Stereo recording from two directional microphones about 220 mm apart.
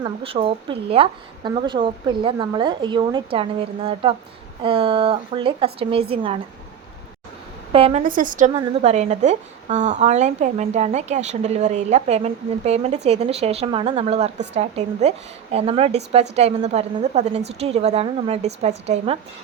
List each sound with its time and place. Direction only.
0.0 s a woman's voice: 25° right (ahead or behind)
4.6 s a woman's voice: 25° right (ahead or behind)
7.7 s a woman's voice: 25° right (ahead or behind)
8.0 s a woman's voice: 35° right (ahead or behind)